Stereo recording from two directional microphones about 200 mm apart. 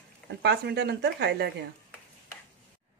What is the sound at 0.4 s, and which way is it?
Speech, 55° right (ahead or behind).